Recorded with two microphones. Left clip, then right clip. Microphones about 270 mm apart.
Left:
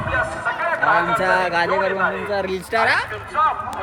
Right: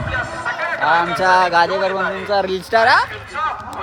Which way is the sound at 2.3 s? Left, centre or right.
Centre.